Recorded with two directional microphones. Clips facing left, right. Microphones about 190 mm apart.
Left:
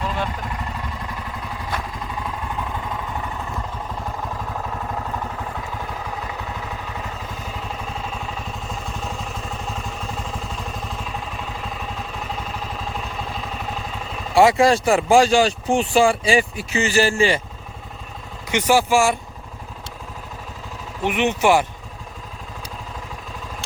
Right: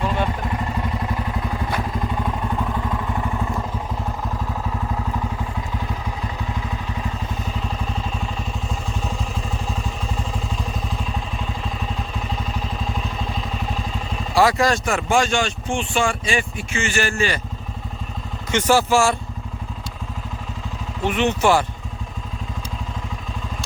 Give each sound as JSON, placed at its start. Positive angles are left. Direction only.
{"t": 14.3, "sound": "speech", "side_deg": 25}
{"t": 18.5, "sound": "speech", "side_deg": 15}
{"t": 21.0, "sound": "speech", "side_deg": 15}